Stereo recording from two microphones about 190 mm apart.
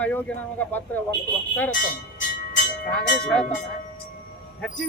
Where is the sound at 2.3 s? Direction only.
45° left (ahead or behind).